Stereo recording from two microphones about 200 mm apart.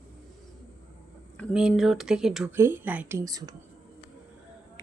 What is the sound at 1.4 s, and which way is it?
Speech, centre (ahead or behind).